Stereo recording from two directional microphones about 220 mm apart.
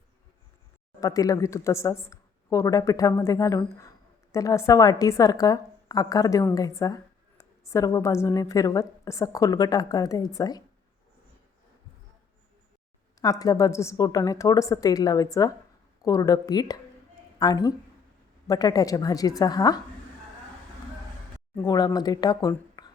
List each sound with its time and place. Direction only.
1.0 s speech: 15° left (ahead or behind)
13.2 s speech: 15° left (ahead or behind)
21.5 s speech: 15° left (ahead or behind)